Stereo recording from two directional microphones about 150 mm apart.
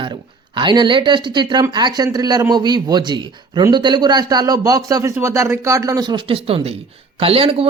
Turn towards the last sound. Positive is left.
turn(degrees=-40)  # may be behind; listen again after turning